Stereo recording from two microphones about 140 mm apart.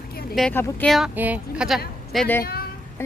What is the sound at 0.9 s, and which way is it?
Speech, centre (ahead or behind).